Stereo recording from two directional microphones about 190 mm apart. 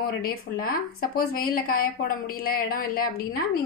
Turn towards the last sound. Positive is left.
turn(degrees=50)  # may be behind; listen again after turning